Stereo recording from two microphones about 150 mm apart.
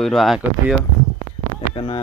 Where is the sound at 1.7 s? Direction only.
35° left (ahead or behind).